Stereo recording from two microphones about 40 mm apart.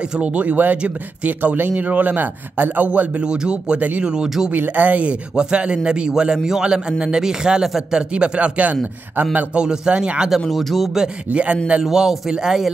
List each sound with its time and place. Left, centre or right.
0.2 s a man's voice: right
1.6 s a man's voice: right
3.2 s a man's voice: right
4.5 s a man's voice: right
5.3 s a man's voice: right
9.6 s a man's voice: right
10.5 s speech: centre
11.3 s a man's voice: right
11.8 s a man's voice: centre